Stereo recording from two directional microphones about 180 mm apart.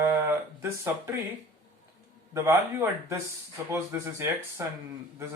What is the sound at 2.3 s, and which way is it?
Speech, 15° right (ahead or behind).